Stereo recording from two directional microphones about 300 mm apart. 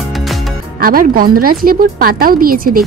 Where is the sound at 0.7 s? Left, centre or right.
Right.